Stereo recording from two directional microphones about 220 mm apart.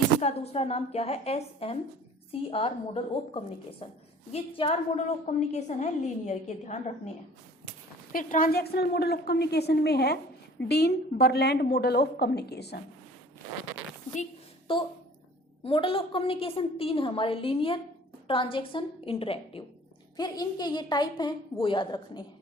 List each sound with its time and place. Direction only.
0.2 s a woman's voice: 30° left (ahead or behind)
8.1 s a woman's voice: 35° left (ahead or behind)
14.7 s a woman's voice: 25° left (ahead or behind)